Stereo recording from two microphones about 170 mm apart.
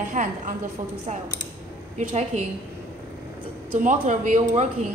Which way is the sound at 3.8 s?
50° right (ahead or behind).